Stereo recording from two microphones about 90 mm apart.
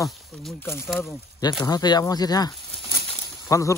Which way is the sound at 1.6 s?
50° left (ahead or behind).